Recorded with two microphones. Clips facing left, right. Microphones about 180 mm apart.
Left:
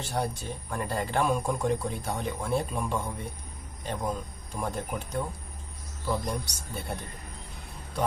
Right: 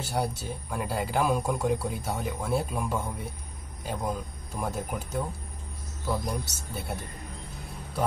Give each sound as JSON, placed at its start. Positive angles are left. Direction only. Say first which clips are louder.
{"t": 0.0, "sound": "speech", "louder": "right 1 dB", "side_deg": -5}